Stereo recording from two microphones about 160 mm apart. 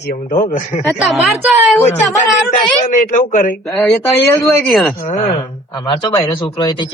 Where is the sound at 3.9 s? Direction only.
20° left (ahead or behind).